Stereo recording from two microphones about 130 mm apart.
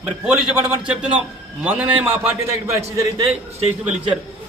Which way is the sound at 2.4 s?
25° right (ahead or behind).